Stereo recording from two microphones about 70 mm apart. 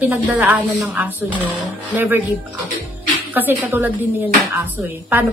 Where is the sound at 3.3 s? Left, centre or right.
Right.